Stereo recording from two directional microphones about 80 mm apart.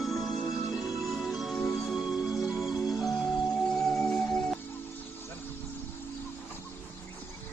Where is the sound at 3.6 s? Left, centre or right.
Centre.